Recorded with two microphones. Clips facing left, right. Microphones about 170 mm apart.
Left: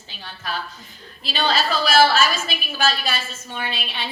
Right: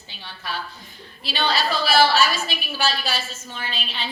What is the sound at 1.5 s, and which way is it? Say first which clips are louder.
Speech: left 2 dB; 45° left (ahead or behind).